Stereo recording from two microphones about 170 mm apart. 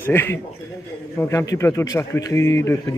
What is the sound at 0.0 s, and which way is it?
Speech, 10° left (ahead or behind).